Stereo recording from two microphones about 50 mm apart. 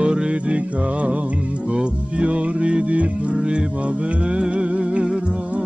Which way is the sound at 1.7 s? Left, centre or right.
Right.